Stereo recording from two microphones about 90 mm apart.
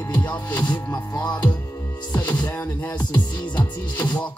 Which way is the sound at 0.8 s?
40° left (ahead or behind).